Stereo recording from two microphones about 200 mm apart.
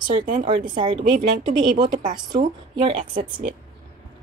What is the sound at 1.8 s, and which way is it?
Speech, 20° right (ahead or behind).